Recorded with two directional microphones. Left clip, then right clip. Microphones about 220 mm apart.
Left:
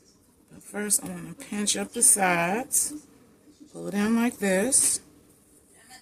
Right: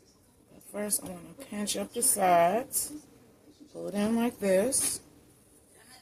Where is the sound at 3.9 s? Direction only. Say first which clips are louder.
Left 4 dB; 45° left (ahead or behind).